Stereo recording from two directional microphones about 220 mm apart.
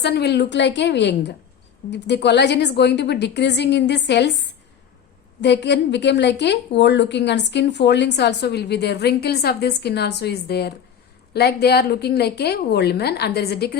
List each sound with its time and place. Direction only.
0.0 s a woman's voice: 50° left (ahead or behind)